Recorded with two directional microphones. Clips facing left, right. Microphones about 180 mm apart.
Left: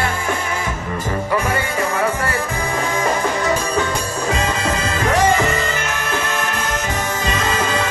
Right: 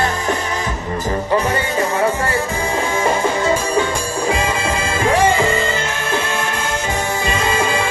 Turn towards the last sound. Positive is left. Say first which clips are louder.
# right 2 dB
turn(degrees=-25)  # may be behind; listen again after turning